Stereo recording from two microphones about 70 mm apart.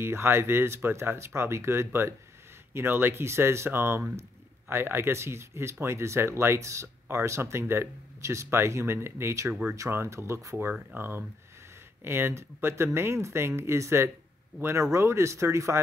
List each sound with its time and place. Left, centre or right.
0.0 s speech: right
9.5 s speech: centre
9.8 s speech: right